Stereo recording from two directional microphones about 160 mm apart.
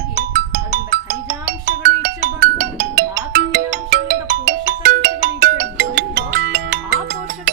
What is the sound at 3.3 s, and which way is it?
Ringtone, 90° right.